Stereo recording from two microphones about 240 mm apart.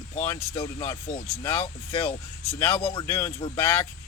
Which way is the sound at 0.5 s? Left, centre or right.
Left.